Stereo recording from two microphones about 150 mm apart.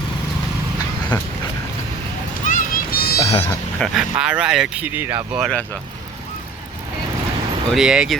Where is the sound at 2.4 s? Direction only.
65° left (ahead or behind); by 3.2 s 85° left.